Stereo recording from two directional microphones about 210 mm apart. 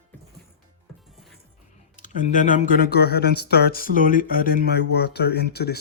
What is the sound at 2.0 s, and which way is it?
Speech, 40° left (ahead or behind).